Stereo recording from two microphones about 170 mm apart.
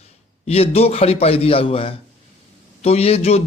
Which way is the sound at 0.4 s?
35° left (ahead or behind).